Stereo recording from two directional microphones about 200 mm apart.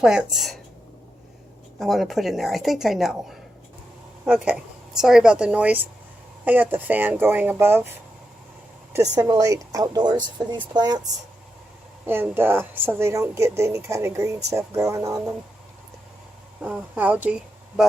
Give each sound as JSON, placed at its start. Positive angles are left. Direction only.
{"t": 0.0, "sound": "a woman's voice", "side_deg": -5}
{"t": 1.8, "sound": "a woman's voice", "side_deg": 0}
{"t": 8.9, "sound": "a woman's voice", "side_deg": -15}
{"t": 16.6, "sound": "speech", "side_deg": -5}